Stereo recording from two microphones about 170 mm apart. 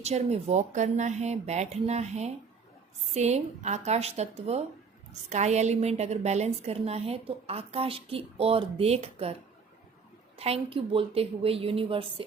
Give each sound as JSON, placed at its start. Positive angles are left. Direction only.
{"t": 0.0, "sound": "a woman's voice", "side_deg": -40}
{"t": 10.3, "sound": "a woman's voice", "side_deg": -35}